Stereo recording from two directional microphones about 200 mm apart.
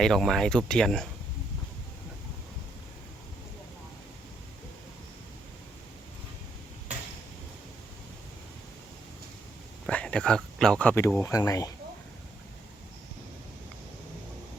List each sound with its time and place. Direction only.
0.0 s speech: centre (ahead or behind)
9.8 s speech: 5° left (ahead or behind)